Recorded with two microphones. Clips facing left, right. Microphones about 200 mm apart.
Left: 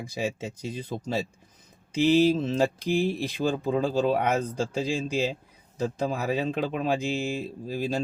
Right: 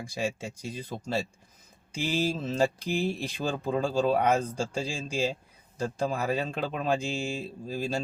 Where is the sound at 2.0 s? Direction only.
10° right (ahead or behind).